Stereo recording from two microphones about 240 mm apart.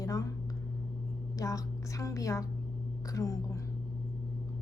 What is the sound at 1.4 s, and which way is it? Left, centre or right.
A woman's voice, centre.